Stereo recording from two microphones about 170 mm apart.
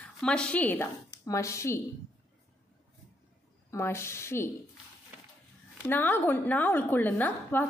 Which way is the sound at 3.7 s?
15° left (ahead or behind).